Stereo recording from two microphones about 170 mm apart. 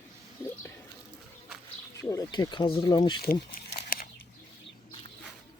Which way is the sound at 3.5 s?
50° left (ahead or behind).